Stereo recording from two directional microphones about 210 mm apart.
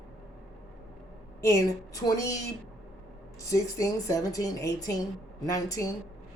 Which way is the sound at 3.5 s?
15° left (ahead or behind).